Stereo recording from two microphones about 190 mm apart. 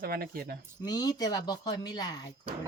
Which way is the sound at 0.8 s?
20° left (ahead or behind).